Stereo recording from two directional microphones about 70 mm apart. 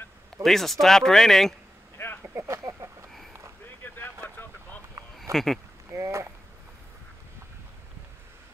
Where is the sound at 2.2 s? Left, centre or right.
Right.